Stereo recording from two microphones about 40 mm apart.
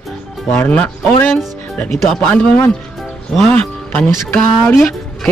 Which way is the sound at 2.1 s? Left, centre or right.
Left.